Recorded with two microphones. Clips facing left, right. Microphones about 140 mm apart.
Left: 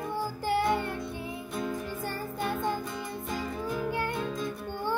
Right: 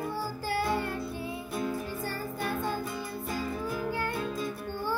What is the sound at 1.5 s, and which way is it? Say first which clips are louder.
Music: right 1 dB; 5° right (ahead or behind).